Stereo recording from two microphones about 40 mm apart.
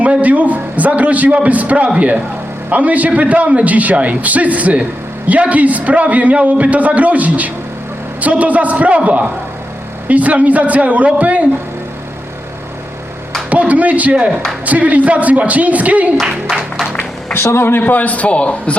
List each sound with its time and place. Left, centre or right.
0.0 s a man's voice: right
10.1 s a man's voice: right
13.5 s a man's voice: right
16.5 s applause: centre
17.3 s speech: left
17.7 s a man's voice: left